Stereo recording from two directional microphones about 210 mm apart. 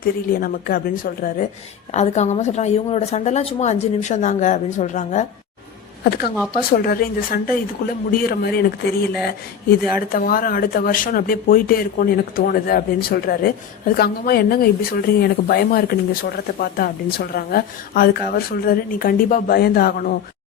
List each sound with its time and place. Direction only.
0.0 s a woman's voice: 45° left (ahead or behind)
6.1 s speech: 50° left (ahead or behind)
10.1 s speech: 45° left (ahead or behind)